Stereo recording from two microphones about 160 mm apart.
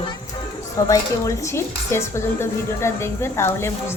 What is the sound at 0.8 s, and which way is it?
Speech, 20° left (ahead or behind).